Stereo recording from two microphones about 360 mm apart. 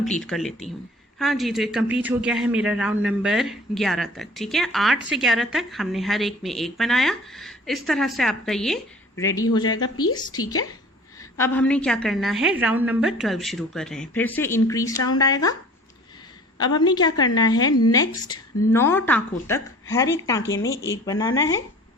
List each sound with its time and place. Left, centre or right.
0.2 s a man's voice: centre
11.2 s a man's voice: centre
16.6 s a woman's voice: centre
17.7 s speech: left
18.3 s a woman's voice: centre